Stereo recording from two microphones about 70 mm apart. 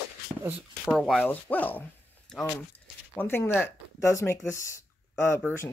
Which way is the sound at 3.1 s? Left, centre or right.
Left.